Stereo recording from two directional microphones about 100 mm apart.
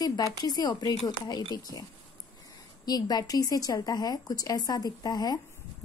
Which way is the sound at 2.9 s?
40° left (ahead or behind).